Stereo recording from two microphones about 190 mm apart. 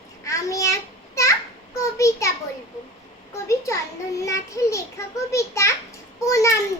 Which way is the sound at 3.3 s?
15° left (ahead or behind).